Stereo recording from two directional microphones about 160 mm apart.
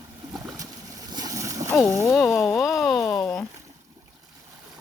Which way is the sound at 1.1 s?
20° right (ahead or behind).